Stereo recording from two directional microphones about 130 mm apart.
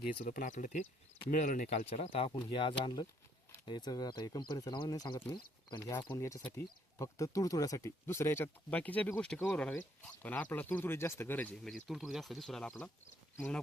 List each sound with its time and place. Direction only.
0.3 s speech: 75° left (ahead or behind)
1.3 s speech: 90° left
1.9 s speech: 50° left (ahead or behind); by 11.7 s 10° left (ahead or behind)
11.9 s speech: centre (ahead or behind)